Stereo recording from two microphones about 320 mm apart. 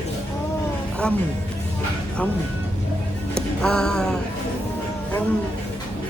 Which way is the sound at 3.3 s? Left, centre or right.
Centre.